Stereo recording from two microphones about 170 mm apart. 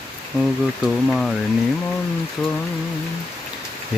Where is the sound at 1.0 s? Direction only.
5° left (ahead or behind).